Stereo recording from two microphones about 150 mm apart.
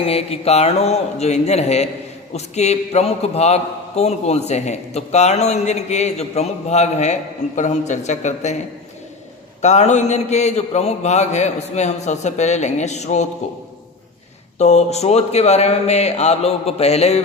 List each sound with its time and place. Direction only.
0.0 s a man's voice: 40° left (ahead or behind)
14.6 s a man's voice: 50° left (ahead or behind)